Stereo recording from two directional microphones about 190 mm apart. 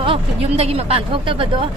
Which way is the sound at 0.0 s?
30° right (ahead or behind).